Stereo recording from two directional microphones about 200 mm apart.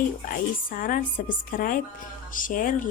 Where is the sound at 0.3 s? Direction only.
45° left (ahead or behind).